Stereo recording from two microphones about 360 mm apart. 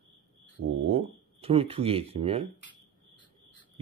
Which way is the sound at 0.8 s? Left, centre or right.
Centre.